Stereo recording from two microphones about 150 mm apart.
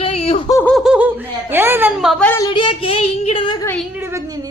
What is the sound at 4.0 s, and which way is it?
Speech, 20° right (ahead or behind).